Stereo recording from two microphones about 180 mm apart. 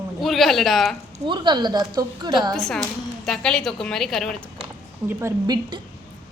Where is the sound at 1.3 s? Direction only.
25° right (ahead or behind).